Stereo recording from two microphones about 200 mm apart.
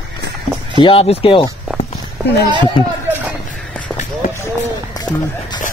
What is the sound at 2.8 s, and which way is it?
Speech, 25° left (ahead or behind).